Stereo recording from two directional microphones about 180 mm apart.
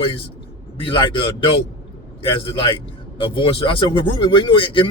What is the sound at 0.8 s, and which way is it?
Speech, 25° left (ahead or behind).